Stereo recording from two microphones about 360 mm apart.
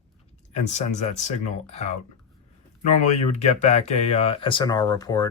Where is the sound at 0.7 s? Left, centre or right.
Centre.